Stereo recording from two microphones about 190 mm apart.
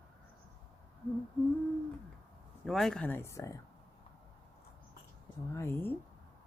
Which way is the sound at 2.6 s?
Centre (ahead or behind).